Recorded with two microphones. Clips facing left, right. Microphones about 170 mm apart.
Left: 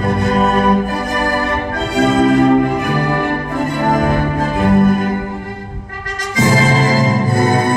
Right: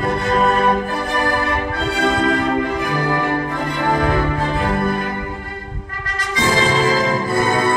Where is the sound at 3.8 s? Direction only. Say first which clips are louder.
Left 2 dB; 45° left (ahead or behind).